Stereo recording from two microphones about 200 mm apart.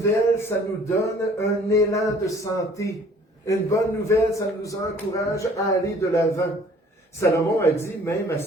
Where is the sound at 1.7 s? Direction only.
15° left (ahead or behind).